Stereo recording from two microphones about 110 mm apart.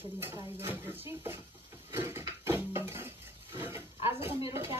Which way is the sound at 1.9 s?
20° right (ahead or behind).